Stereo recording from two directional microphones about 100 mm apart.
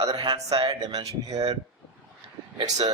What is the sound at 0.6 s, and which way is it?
Speech, 40° right (ahead or behind).